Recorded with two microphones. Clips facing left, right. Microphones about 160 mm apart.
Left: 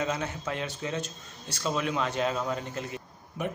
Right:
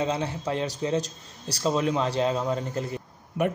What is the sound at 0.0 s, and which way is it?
A man's voice, 30° right (ahead or behind).